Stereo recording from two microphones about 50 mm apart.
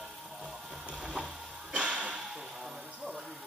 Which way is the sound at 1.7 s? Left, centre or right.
Centre.